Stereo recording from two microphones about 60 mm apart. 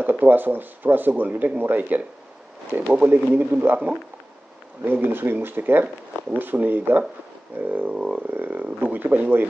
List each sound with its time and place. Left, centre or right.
0.0 s speech: right
5.0 s speech: right
7.9 s a sound: centre
8.3 s speech: right